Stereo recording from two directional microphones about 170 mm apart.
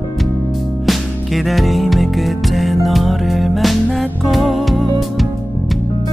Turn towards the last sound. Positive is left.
turn(degrees=0)  # may be behind; listen again after turning